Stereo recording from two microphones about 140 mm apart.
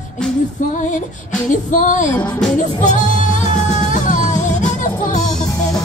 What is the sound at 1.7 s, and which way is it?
Music, 65° left (ahead or behind).